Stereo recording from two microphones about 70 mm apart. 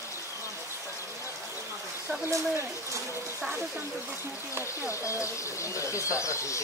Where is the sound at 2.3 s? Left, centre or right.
Right.